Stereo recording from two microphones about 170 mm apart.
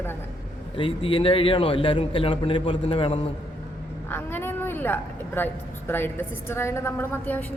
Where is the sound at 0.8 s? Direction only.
30° left (ahead or behind).